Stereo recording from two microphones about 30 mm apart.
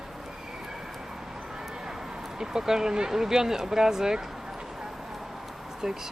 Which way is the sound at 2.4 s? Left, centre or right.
Centre.